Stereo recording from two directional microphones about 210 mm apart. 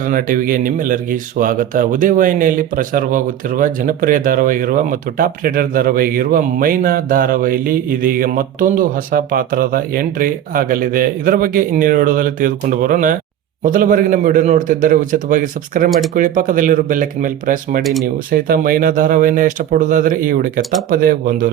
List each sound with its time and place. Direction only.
0.0 s speech: 40° right (ahead or behind)